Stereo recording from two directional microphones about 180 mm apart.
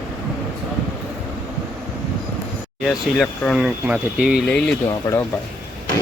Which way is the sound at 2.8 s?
Centre (ahead or behind).